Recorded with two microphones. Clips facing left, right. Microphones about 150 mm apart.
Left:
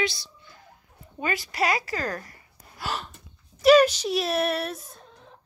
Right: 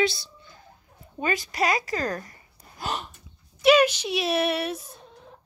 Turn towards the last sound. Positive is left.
turn(degrees=0)  # may be behind; listen again after turning